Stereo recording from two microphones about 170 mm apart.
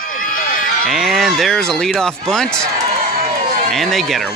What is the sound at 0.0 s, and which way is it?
Run, 55° left (ahead or behind).